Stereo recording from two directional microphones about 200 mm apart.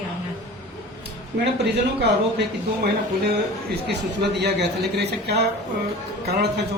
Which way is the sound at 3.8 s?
55° right (ahead or behind).